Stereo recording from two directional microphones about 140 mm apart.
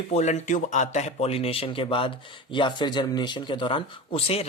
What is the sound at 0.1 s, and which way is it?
Speech, 55° left (ahead or behind).